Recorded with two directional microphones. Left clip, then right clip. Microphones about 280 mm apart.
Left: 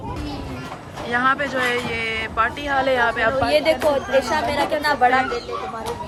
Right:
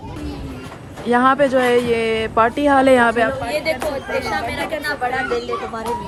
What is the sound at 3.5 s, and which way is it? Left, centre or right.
Speech, left.